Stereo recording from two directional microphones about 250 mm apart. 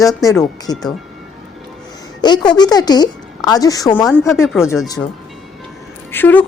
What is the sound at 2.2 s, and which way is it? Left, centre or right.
A woman's voice, centre.